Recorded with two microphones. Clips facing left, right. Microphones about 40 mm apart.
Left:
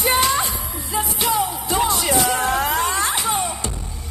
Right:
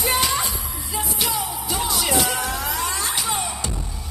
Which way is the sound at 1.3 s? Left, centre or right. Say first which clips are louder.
Left 5 dB; left.